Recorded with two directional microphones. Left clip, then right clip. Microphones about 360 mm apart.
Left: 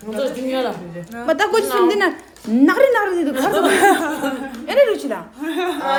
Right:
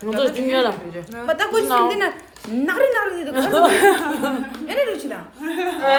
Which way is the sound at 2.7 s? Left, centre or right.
Left.